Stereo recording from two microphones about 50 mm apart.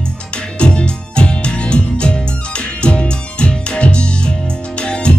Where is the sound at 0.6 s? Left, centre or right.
Centre.